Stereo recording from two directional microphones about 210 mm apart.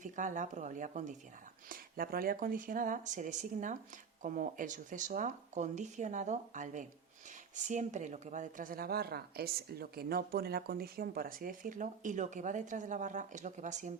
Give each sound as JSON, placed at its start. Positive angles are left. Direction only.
{"t": 0.0, "sound": "a woman's voice", "side_deg": -35}